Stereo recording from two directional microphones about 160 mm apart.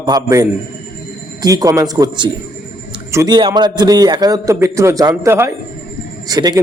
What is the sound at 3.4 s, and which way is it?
Speech, 30° right (ahead or behind).